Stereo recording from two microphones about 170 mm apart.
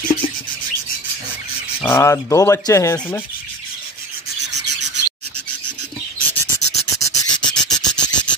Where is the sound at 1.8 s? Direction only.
15° left (ahead or behind).